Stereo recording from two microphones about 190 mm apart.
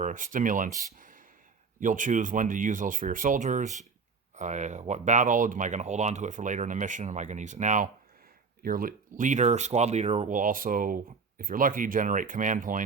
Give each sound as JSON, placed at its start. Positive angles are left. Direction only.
{"t": 0.0, "sound": "speech", "side_deg": -45}
{"t": 0.9, "sound": "a sound", "side_deg": -45}
{"t": 1.8, "sound": "speech", "side_deg": -45}